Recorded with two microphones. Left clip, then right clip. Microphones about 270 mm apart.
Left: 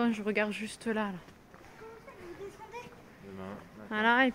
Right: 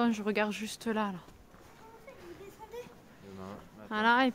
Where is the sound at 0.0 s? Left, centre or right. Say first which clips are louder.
Even; centre.